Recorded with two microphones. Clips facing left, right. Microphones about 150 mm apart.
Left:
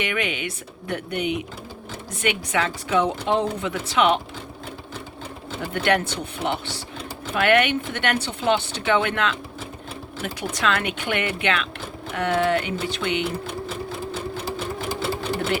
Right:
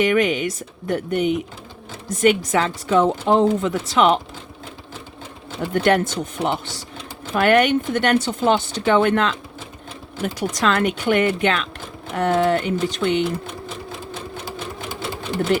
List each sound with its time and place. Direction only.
0.0 s speech: 40° right (ahead or behind)
5.7 s speech: 40° right (ahead or behind)